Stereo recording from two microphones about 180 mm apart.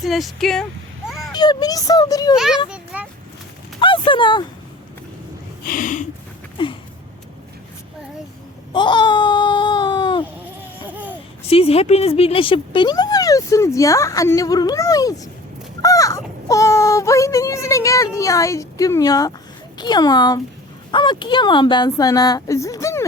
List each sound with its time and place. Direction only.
0.0 s a sound: centre (ahead or behind)
1.3 s speech: 25° left (ahead or behind)
2.3 s speech: centre (ahead or behind)
2.6 s a sound: 5° right (ahead or behind)
3.8 s a sound: 30° left (ahead or behind)
5.6 s snort: 50° left (ahead or behind)
8.7 s baby cry: 25° left (ahead or behind)
10.4 s laughter: 10° right (ahead or behind)
11.4 s speech: 35° left (ahead or behind); by 23.0 s 15° left (ahead or behind)